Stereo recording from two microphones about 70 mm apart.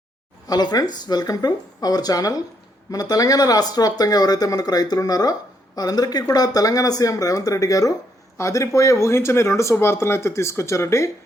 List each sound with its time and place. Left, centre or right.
0.4 s speech: left